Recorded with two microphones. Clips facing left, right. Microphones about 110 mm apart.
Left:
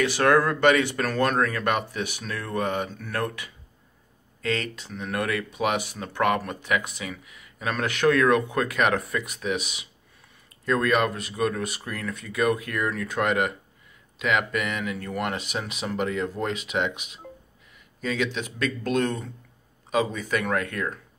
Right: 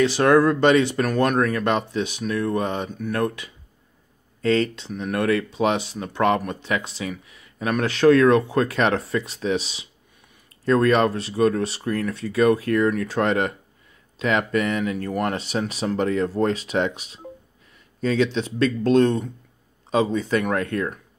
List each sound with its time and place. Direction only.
0.0 s speech: 20° right (ahead or behind)
4.4 s speech: 35° right (ahead or behind)